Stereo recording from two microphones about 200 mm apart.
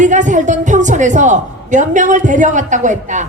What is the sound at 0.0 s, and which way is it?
A woman's voice, 40° right (ahead or behind).